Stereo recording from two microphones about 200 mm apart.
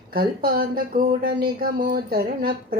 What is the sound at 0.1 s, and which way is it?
Speech, 50° right (ahead or behind).